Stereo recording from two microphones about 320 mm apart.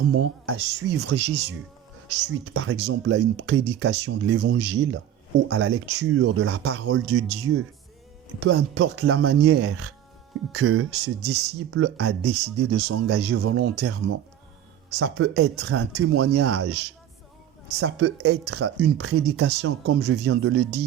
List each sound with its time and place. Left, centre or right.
0.2 s speech: right
8.4 s speech: right
17.7 s speech: right
18.9 s speech: right